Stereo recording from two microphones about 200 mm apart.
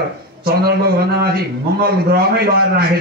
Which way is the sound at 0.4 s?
50° right (ahead or behind).